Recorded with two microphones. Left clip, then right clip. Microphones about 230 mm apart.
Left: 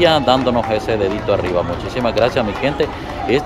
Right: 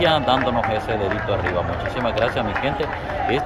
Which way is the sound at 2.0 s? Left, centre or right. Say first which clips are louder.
Left 6 dB; left.